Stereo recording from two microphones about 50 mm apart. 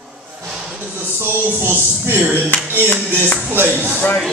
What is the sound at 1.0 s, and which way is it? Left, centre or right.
Speech, right.